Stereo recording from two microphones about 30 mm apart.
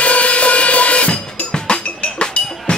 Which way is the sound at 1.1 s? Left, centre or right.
Left.